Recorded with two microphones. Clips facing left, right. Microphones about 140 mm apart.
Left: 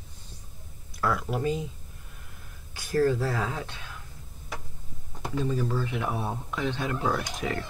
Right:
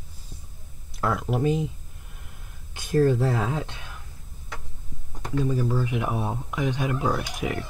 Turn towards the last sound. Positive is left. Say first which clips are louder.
# right 2 dB
turn(degrees=-10)  # may be behind; listen again after turning